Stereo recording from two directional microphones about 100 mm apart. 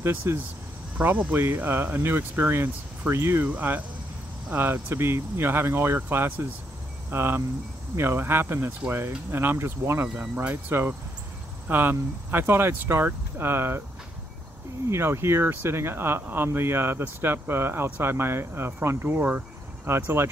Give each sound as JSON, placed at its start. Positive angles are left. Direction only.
{"t": 0.0, "sound": "speech", "side_deg": -25}
{"t": 0.9, "sound": "speech", "side_deg": -15}
{"t": 10.0, "sound": "speech", "side_deg": -10}
{"t": 10.5, "sound": "speech", "side_deg": -25}
{"t": 14.9, "sound": "speech", "side_deg": -25}